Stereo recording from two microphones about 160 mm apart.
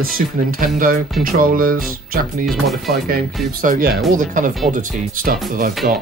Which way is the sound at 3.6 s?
55° right (ahead or behind).